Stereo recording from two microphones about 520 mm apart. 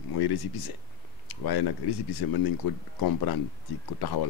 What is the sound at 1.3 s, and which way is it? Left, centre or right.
Speech, left.